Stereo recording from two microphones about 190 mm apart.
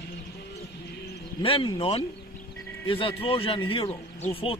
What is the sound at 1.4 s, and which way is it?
Speech, 30° left (ahead or behind).